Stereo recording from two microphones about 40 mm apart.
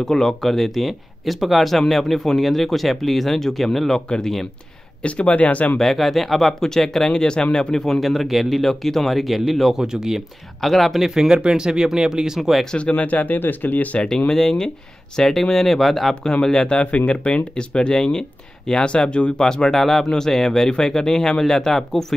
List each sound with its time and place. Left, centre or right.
0.0 s speech: centre
5.0 s speech: left
5.8 s speech: centre; by 7.4 s left
7.5 s speech: centre
9.8 s speech: centre
10.6 s speech: centre
12.4 s speech: centre
12.7 s speech: left
13.4 s speech: left
14.0 s speech: centre
16.2 s speech: left
16.8 s speech: left
19.4 s speech: centre